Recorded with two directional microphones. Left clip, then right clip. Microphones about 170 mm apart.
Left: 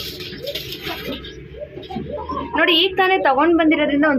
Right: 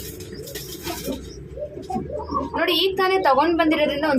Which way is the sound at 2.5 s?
25° left (ahead or behind).